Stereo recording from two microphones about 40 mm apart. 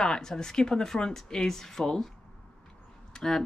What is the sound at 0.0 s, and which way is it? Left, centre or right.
Speech, centre.